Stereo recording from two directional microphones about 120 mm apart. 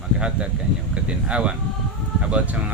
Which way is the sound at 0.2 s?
10° right (ahead or behind).